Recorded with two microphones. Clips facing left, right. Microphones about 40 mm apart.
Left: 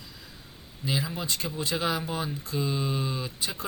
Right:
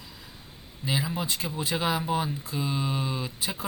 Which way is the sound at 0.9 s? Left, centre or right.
Centre.